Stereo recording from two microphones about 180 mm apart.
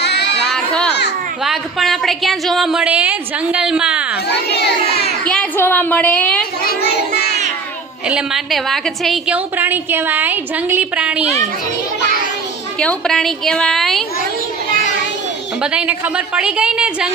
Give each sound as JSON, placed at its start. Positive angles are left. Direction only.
{"t": 0.0, "sound": "a sound", "side_deg": 70}
{"t": 0.4, "sound": "children playing", "side_deg": 5}
{"t": 1.5, "sound": "a woman's voice", "side_deg": 0}
{"t": 4.3, "sound": "a sound", "side_deg": 65}
{"t": 5.2, "sound": "a woman's voice", "side_deg": 5}
{"t": 6.6, "sound": "child singing", "side_deg": 60}
{"t": 8.0, "sound": "a woman's voice", "side_deg": -5}
{"t": 12.8, "sound": "a woman's voice", "side_deg": 5}
{"t": 15.6, "sound": "a woman's voice", "side_deg": -5}